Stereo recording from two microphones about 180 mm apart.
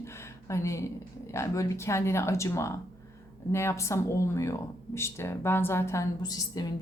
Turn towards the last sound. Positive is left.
turn(degrees=20)  # may be behind; listen again after turning